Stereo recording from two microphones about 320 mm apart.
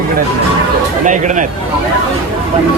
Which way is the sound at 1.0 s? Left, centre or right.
Right.